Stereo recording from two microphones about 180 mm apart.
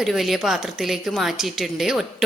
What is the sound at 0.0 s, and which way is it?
A woman's voice, centre (ahead or behind).